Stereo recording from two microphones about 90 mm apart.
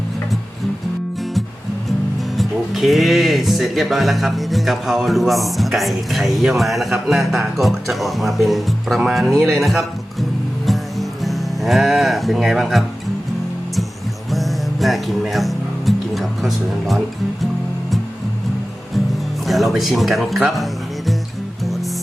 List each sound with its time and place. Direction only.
2.3 s speech: centre (ahead or behind)
10.7 s music: centre (ahead or behind)
14.3 s music: centre (ahead or behind)
19.5 s speech: centre (ahead or behind)